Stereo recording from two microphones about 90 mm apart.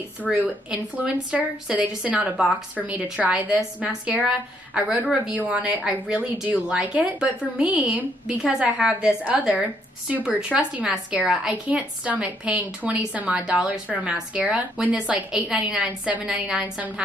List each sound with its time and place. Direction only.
0.3 s speech: 15° right (ahead or behind)